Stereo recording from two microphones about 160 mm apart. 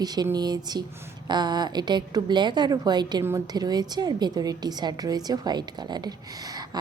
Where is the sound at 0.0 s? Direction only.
25° right (ahead or behind).